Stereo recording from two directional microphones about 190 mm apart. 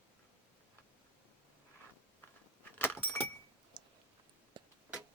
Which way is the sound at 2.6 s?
10° left (ahead or behind).